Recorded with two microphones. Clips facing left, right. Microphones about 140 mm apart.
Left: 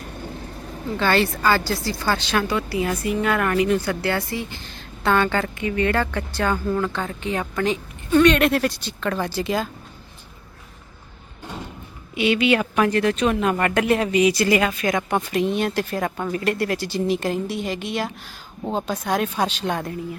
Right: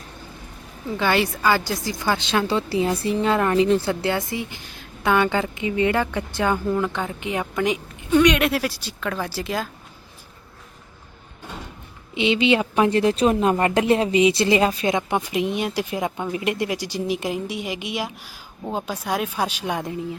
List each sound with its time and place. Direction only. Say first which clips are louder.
0.9 s a woman's voice: left 1 dB; 15° right (ahead or behind)
12.1 s a woman's voice: even; 20° right (ahead or behind)